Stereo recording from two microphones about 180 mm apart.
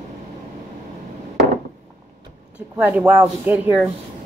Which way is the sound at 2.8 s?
10° right (ahead or behind).